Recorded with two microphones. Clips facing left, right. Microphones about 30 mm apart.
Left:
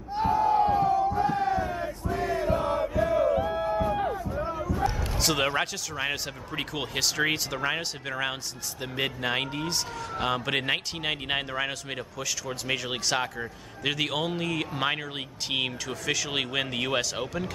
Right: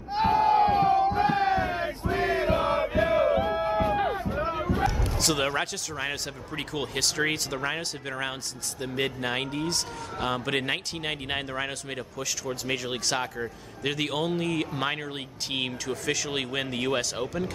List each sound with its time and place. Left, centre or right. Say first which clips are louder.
0.1 s crowd: right 2 dB; right
3.9 s a sound: right 2 dB; right
5.0 s a man's voice: even; centre